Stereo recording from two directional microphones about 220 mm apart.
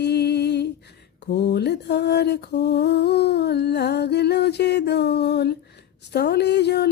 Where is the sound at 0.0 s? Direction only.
50° left (ahead or behind).